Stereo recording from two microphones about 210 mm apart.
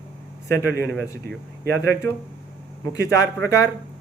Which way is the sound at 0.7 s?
50° right (ahead or behind).